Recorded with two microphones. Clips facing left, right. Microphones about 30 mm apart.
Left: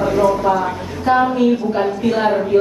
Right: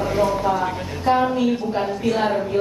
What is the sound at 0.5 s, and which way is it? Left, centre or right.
A woman's voice, centre.